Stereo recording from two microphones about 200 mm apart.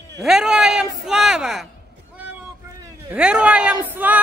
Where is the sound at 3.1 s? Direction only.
5° right (ahead or behind).